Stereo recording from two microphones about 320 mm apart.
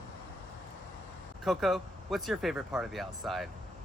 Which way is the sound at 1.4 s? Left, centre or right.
Centre.